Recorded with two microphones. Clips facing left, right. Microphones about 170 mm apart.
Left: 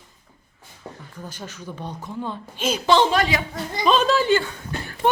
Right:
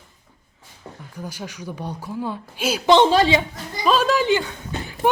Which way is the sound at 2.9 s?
25° right (ahead or behind).